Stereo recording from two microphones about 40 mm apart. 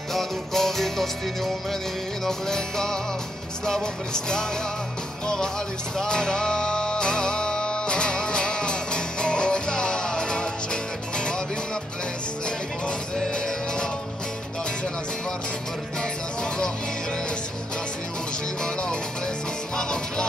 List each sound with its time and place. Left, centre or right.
0.1 s music: centre; by 11.4 s left
13.3 s music: left
18.6 s music: left